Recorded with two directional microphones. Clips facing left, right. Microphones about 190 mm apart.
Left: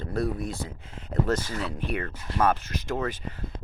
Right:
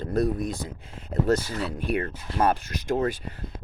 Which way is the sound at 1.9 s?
35° right (ahead or behind).